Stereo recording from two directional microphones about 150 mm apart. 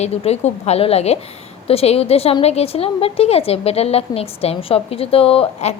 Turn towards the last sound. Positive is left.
turn(degrees=45)  # may be behind; listen again after turning